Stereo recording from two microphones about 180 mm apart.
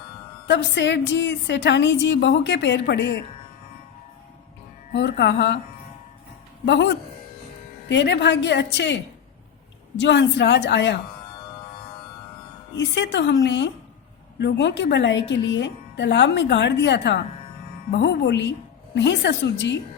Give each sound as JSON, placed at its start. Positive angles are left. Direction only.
{"t": 0.4, "sound": "speech", "side_deg": 75}
{"t": 4.9, "sound": "speech", "side_deg": 70}
{"t": 6.7, "sound": "speech", "side_deg": 75}
{"t": 10.0, "sound": "speech", "side_deg": 75}
{"t": 12.7, "sound": "speech", "side_deg": 75}